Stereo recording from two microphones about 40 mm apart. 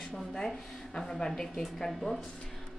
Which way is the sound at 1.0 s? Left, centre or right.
Centre.